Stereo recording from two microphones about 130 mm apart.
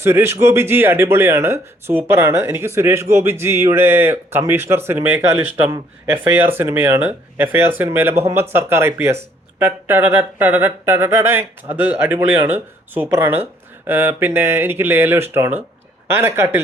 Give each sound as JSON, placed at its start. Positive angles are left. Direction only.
{"t": 0.0, "sound": "speech", "side_deg": -20}